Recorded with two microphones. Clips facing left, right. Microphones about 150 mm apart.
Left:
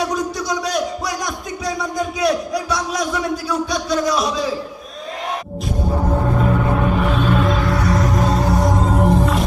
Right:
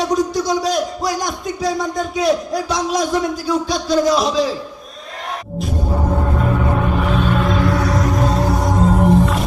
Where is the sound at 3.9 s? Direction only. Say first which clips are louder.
Right 4 dB; 35° right (ahead or behind).